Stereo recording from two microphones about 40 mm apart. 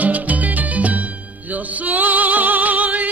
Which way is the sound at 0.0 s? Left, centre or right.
Right.